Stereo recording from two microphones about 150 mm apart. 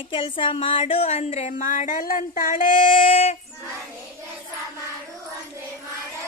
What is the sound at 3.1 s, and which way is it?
Speech, 45° left (ahead or behind).